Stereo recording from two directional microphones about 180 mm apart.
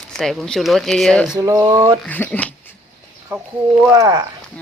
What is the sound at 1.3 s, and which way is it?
Speech, 20° right (ahead or behind).